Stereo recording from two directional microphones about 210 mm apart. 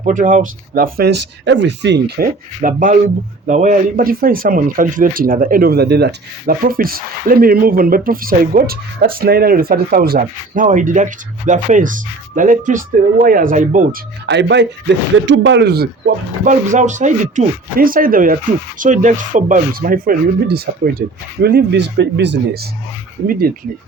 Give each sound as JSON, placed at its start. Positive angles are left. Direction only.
{"t": 0.0, "sound": "speech", "side_deg": -35}
{"t": 2.6, "sound": "speech", "side_deg": -40}
{"t": 14.3, "sound": "speech", "side_deg": -55}
{"t": 23.2, "sound": "speech", "side_deg": -45}